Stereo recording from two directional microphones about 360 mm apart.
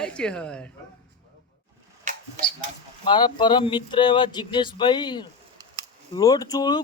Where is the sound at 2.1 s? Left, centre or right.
Centre.